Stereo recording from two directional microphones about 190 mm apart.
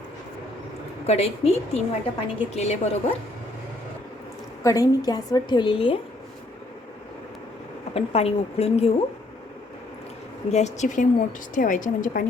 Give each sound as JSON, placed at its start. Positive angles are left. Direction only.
{"t": 1.0, "sound": "a woman's voice", "side_deg": 35}
{"t": 4.6, "sound": "a woman's voice", "side_deg": 15}
{"t": 7.9, "sound": "a woman's voice", "side_deg": 30}
{"t": 10.5, "sound": "a woman's voice", "side_deg": 40}